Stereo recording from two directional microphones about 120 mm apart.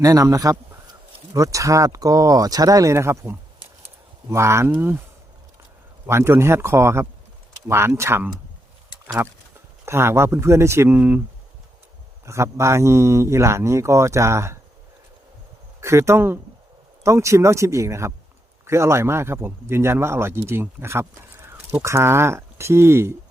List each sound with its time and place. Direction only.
0.0 s speech: 30° right (ahead or behind)
3.8 s a sound: 25° right (ahead or behind)
4.7 s speech: 15° right (ahead or behind)
6.1 s speech: 20° right (ahead or behind)
12.2 s speech: 25° right (ahead or behind)
15.8 s speech: 25° right (ahead or behind)